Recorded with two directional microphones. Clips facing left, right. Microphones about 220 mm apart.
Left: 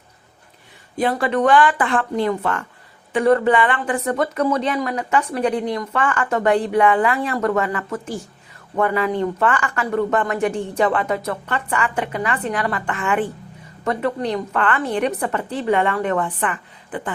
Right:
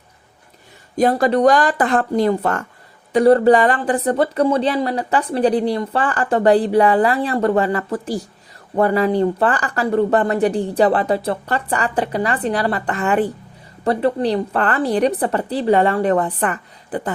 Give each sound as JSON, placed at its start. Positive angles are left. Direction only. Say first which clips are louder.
{"t": 0.9, "sound": "speech", "louder": "right 4 dB", "side_deg": -40}